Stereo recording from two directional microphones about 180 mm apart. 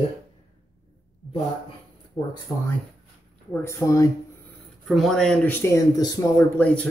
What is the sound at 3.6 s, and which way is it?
Speech, 15° left (ahead or behind).